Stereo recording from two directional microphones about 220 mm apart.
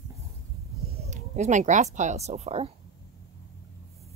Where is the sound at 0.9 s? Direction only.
30° right (ahead or behind).